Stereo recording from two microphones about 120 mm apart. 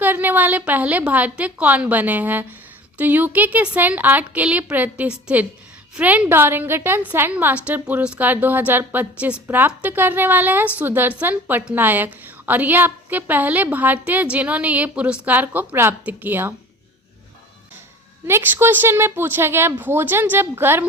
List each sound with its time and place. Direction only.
0.0 s a woman's voice: 15° right (ahead or behind)
18.3 s a woman's voice: 20° right (ahead or behind)